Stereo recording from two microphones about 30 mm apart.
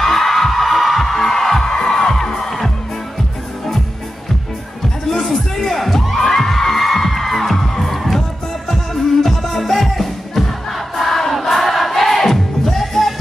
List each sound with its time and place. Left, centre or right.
0.0 s music: centre
5.1 s music: centre
11.0 s choir: centre
11.4 s music: centre